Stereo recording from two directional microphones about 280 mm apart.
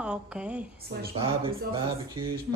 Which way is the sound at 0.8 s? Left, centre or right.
Right.